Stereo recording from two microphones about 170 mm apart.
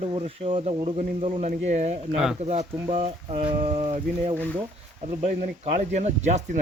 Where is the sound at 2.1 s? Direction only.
5° right (ahead or behind).